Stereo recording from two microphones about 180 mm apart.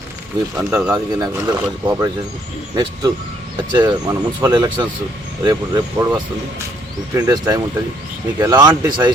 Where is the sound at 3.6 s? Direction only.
25° right (ahead or behind).